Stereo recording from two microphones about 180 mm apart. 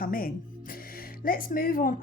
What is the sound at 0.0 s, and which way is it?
Music, 50° left (ahead or behind).